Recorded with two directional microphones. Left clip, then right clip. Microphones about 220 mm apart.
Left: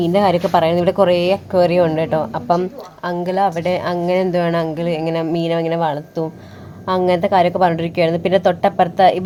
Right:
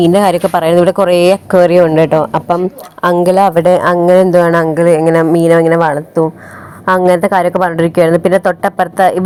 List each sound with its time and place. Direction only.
0.0 s speech: 25° right (ahead or behind)
4.6 s speech: 10° right (ahead or behind)
5.3 s speech: 30° right (ahead or behind)
5.6 s speech: 15° right (ahead or behind)